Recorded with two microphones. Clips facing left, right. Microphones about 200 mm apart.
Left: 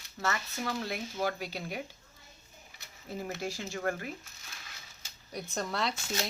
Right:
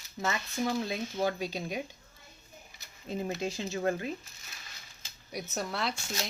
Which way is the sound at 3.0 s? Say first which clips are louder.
Right 3 dB; 20° right (ahead or behind).